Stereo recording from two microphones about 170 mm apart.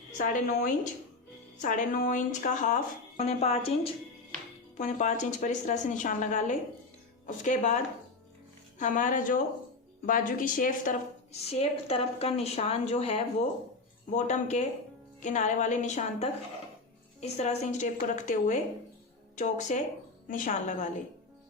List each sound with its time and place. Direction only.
0.2 s speech: 55° left (ahead or behind); by 3.7 s 35° left (ahead or behind)
4.8 s speech: 45° left (ahead or behind)
8.8 s speech: 50° left (ahead or behind)
11.4 s a woman's voice: 35° left (ahead or behind)